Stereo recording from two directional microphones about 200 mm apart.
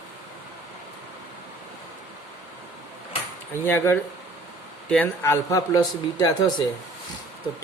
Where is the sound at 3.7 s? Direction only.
10° left (ahead or behind).